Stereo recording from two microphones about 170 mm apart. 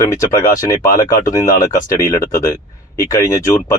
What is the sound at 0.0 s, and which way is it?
Speech, 20° left (ahead or behind).